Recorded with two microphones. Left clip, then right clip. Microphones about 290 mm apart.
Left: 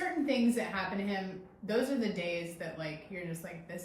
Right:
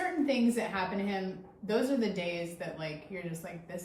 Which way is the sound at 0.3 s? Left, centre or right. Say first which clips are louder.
Right 1 dB; centre.